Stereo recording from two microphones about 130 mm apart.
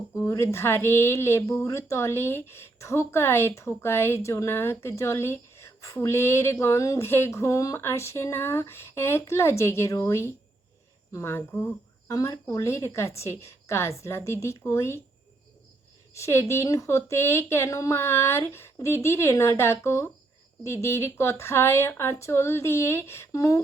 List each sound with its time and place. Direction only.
0.2 s a woman's voice: 20° left (ahead or behind)
16.1 s speech: 20° left (ahead or behind)